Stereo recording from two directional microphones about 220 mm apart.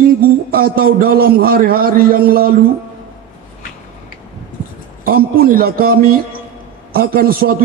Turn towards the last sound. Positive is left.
turn(degrees=-40)  # may be behind; listen again after turning